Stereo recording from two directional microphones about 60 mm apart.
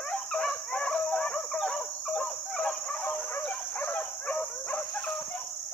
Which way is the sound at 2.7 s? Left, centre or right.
Left.